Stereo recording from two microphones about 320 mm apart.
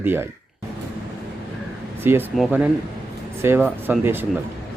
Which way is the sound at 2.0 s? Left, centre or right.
Centre.